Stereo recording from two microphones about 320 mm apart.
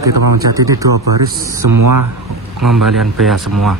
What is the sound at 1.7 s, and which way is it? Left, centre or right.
Speech, right.